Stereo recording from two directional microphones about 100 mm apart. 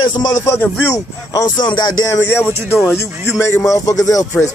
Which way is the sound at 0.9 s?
35° left (ahead or behind).